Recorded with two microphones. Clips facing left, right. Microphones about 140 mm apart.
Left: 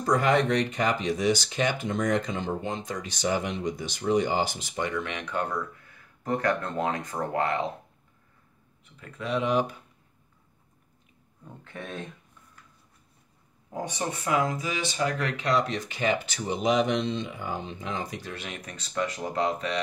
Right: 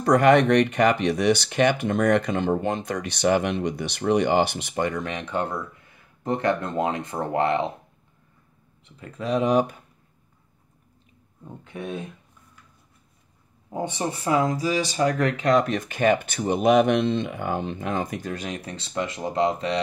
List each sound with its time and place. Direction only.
0.0 s speech: 65° right (ahead or behind); by 7.6 s 25° right (ahead or behind)
8.9 s speech: 35° right (ahead or behind)
11.4 s speech: 15° right (ahead or behind)
13.7 s speech: 25° right (ahead or behind)